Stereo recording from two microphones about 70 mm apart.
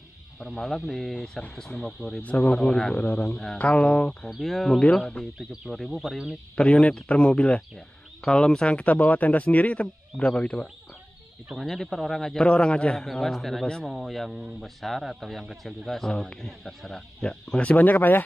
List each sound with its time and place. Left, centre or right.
0.4 s speech: centre
2.2 s speech: left
2.5 s speech: centre
3.0 s speech: left
4.3 s speech: centre
5.7 s speech: centre
6.5 s speech: centre
11.5 s speech: centre; by 18.2 s left